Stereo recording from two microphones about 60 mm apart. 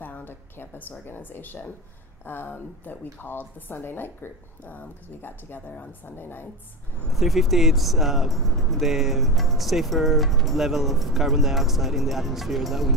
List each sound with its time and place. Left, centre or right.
0.0 s a woman's voice: left
7.1 s speech: centre